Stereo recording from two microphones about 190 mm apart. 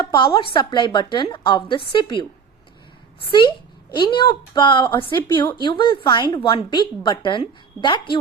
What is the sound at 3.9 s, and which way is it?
Speech, 25° left (ahead or behind).